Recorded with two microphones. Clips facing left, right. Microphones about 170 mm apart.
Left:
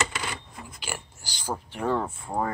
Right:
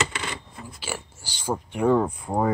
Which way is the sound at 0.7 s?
5° right (ahead or behind).